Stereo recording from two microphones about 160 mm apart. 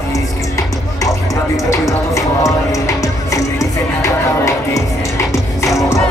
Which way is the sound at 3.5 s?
20° left (ahead or behind).